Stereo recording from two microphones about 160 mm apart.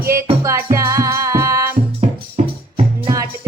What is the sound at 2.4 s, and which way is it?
Music, 40° right (ahead or behind).